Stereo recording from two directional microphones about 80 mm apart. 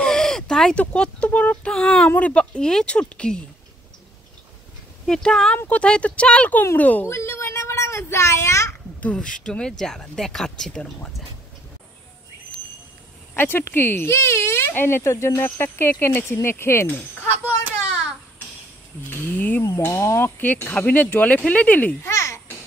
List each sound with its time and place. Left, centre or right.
0.0 s speech: centre
2.0 s speech: centre
5.0 s speech: centre
7.1 s a sound: left
9.0 s speech: centre
13.3 s speech: left
19.0 s speech: left
19.8 s speech: left
22.0 s babbling: left